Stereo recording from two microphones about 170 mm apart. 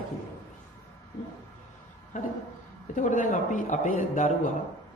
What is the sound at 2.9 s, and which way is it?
A man's voice, 50° left (ahead or behind).